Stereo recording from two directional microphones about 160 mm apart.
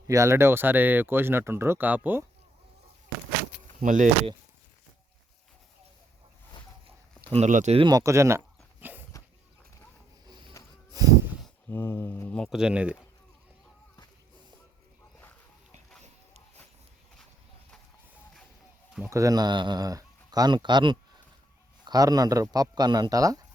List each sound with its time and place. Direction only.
0.1 s speech: 20° right (ahead or behind)
3.8 s speech: 55° right (ahead or behind)
7.3 s speech: 45° right (ahead or behind)
7.8 s speech: 25° right (ahead or behind)
8.8 s a sound: 10° right (ahead or behind)
10.2 s music: 30° right (ahead or behind)
10.9 s snort: 20° right (ahead or behind)
11.7 s speech: 15° left (ahead or behind); by 13.0 s 5° right (ahead or behind)
19.1 s speech: 20° right (ahead or behind)